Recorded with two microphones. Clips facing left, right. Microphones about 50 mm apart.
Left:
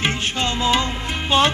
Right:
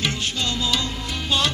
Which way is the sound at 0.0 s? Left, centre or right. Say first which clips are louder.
Left 3 dB; left.